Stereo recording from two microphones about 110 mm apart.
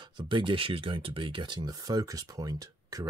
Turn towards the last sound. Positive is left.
turn(degrees=-35)  # may be behind; listen again after turning